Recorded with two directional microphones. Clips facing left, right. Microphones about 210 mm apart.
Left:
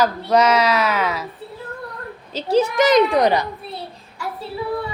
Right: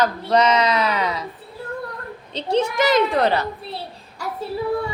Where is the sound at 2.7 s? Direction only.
20° left (ahead or behind).